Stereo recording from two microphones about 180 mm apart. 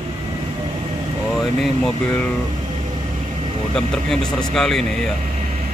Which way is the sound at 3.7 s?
5° left (ahead or behind).